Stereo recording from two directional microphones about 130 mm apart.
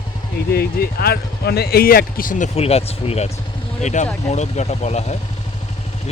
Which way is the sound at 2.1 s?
85° left.